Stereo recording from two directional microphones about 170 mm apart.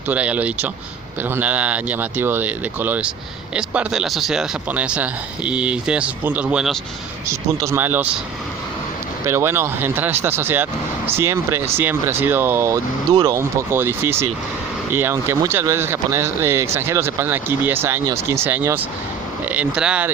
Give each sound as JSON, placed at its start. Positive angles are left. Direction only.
{"t": 0.1, "sound": "speech", "side_deg": -10}
{"t": 7.3, "sound": "speech", "side_deg": -15}
{"t": 9.2, "sound": "speech", "side_deg": -15}